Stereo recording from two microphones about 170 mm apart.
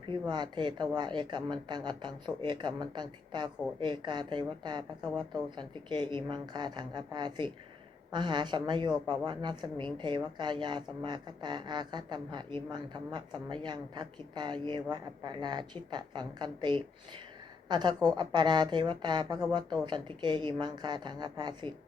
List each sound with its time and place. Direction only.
0.1 s a woman's voice: 25° right (ahead or behind)